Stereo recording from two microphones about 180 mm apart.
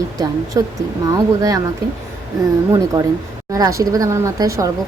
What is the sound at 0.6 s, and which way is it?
Speech, 20° right (ahead or behind).